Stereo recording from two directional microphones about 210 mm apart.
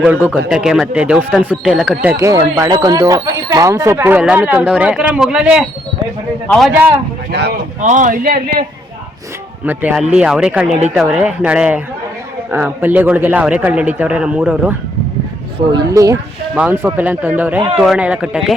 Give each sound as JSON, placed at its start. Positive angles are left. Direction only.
{"t": 0.0, "sound": "speech", "side_deg": -5}
{"t": 2.1, "sound": "speech", "side_deg": -15}
{"t": 7.3, "sound": "speech", "side_deg": -50}
{"t": 7.8, "sound": "a man's voice", "side_deg": -35}
{"t": 9.6, "sound": "speech", "side_deg": -10}
{"t": 15.5, "sound": "speech", "side_deg": -20}